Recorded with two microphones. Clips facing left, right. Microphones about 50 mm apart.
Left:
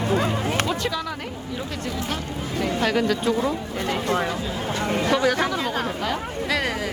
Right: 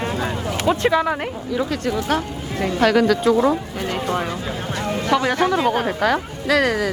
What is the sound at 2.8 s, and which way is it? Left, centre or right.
Speech, right.